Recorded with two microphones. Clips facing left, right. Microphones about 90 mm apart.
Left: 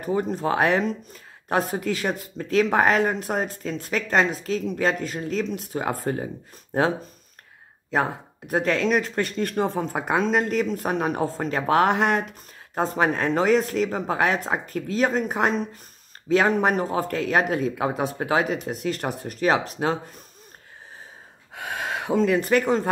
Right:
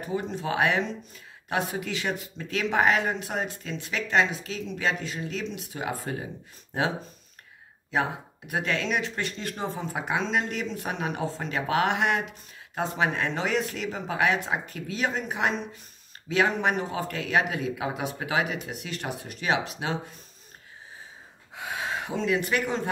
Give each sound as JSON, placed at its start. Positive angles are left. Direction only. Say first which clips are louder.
{"t": 0.0, "sound": "speech", "louder": "left 6 dB", "side_deg": 45}
{"t": 7.9, "sound": "speech", "louder": "left 3 dB", "side_deg": 40}
{"t": 21.5, "sound": "speech", "louder": "left 2 dB", "side_deg": 55}